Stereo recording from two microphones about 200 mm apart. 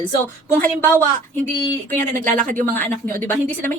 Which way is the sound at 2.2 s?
40° right (ahead or behind).